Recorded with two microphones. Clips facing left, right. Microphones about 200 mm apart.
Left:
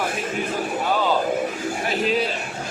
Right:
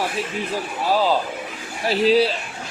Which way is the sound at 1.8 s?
35° right (ahead or behind).